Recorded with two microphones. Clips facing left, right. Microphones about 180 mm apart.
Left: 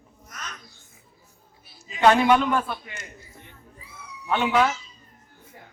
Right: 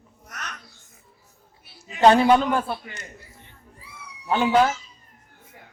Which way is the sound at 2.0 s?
35° right (ahead or behind).